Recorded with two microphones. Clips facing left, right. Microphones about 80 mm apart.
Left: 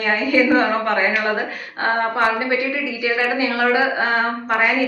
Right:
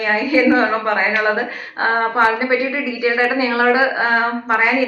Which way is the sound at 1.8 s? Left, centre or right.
Right.